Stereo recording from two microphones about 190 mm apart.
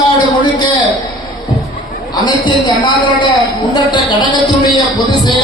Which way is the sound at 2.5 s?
25° left (ahead or behind).